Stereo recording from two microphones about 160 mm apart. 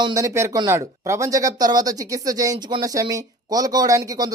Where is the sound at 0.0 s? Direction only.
20° right (ahead or behind).